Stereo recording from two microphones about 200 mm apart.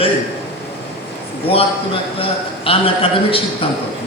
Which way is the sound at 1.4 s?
30° left (ahead or behind).